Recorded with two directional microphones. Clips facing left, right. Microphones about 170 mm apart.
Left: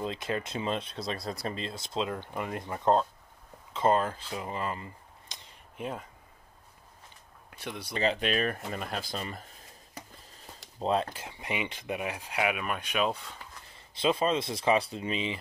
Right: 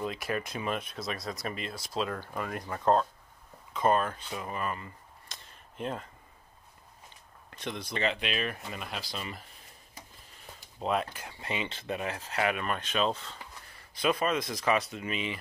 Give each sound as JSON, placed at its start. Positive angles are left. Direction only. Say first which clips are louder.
{"t": 0.0, "sound": "speech", "louder": "even", "side_deg": 25}
{"t": 7.5, "sound": "speech", "louder": "right 2 dB", "side_deg": 10}
{"t": 7.9, "sound": "speech", "louder": "left 4 dB", "side_deg": 35}
{"t": 10.8, "sound": "speech", "louder": "left 2 dB", "side_deg": 30}
{"t": 11.1, "sound": "speech", "louder": "left 1 dB", "side_deg": 20}
{"t": 13.7, "sound": "speech", "louder": "left 1 dB", "side_deg": 25}